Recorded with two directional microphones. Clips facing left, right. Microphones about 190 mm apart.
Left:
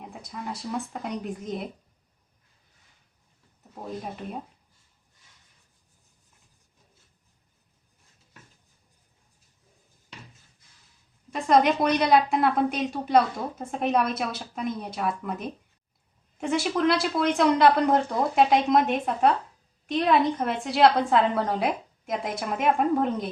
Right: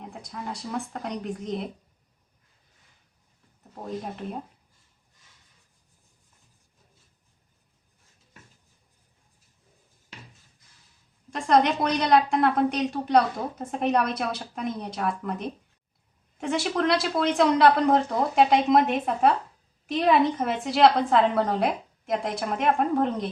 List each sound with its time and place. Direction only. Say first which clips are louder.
0.0 s a woman's voice: even; centre (ahead or behind)
3.8 s a woman's voice: right 2 dB; 5° left (ahead or behind)
11.3 s a woman's voice: left 1 dB; 5° left (ahead or behind)